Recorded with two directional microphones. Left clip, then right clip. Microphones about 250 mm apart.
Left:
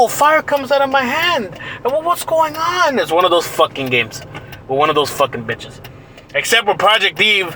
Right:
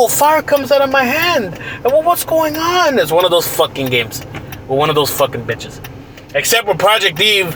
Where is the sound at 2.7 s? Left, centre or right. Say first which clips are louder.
Right 2 dB; centre.